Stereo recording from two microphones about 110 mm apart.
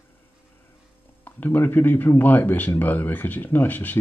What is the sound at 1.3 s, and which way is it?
Speech, 20° left (ahead or behind).